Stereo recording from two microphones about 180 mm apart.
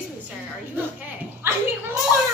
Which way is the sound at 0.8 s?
10° right (ahead or behind).